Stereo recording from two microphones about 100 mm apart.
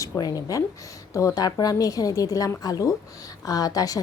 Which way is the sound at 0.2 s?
40° left (ahead or behind).